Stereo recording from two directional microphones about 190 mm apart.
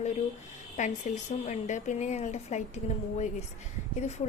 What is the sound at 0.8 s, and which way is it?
Speech, 40° left (ahead or behind).